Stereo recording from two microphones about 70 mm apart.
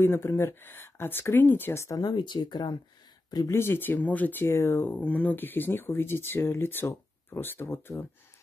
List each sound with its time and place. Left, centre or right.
0.0 s speech: left
1.9 s speech: left
3.5 s speech: left
4.5 s speech: left
4.9 s speech: left